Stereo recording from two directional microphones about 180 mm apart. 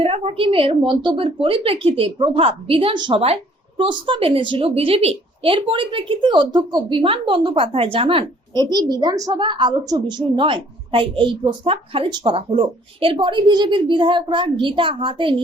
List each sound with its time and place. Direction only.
0.0 s a woman's voice: 35° right (ahead or behind)